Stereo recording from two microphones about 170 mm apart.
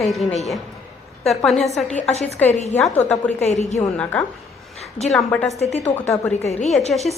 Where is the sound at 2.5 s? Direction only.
40° left (ahead or behind).